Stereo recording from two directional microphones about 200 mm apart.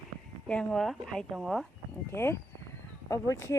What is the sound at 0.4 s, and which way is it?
Speech, 5° left (ahead or behind).